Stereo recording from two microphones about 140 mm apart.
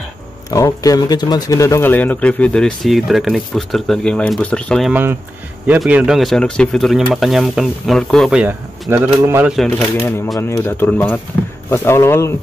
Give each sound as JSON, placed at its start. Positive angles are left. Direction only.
{"t": 0.5, "sound": "speech", "side_deg": 25}
{"t": 5.8, "sound": "speech", "side_deg": -5}
{"t": 8.9, "sound": "speech", "side_deg": -15}
{"t": 10.0, "sound": "speech", "side_deg": 20}